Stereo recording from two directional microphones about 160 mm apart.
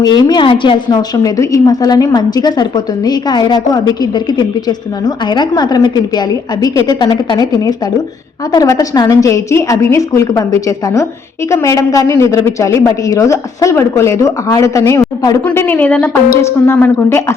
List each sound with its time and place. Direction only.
0.0 s a woman's voice: 25° left (ahead or behind)
15.4 s a woman's voice: 10° left (ahead or behind)